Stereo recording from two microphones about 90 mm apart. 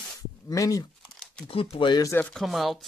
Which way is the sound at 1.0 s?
5° left (ahead or behind).